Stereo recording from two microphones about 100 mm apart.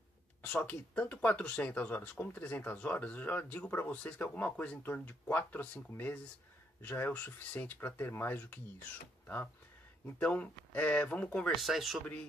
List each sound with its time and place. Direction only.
0.4 s speech: 15° left (ahead or behind)
10.1 s speech: 15° left (ahead or behind)
11.6 s speech: centre (ahead or behind)